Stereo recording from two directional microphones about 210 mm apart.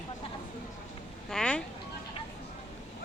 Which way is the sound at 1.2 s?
5° left (ahead or behind).